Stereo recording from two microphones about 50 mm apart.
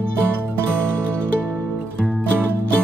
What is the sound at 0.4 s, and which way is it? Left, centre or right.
Music, right.